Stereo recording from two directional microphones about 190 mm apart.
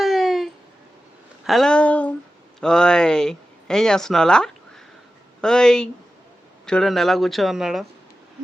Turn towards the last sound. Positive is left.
turn(degrees=0)  # may be behind; listen again after turning